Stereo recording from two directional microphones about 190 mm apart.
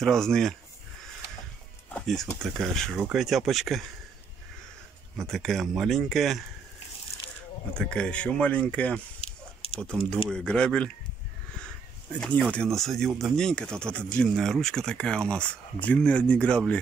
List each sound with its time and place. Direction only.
0.0 s speech: 5° left (ahead or behind)
2.0 s a sound: centre (ahead or behind)
2.4 s speech: centre (ahead or behind)
5.2 s speech: centre (ahead or behind)
7.7 s speech: 5° left (ahead or behind)
9.2 s a sound: 30° left (ahead or behind)
9.8 s speech: 5° left (ahead or behind)
12.5 s speech: centre (ahead or behind)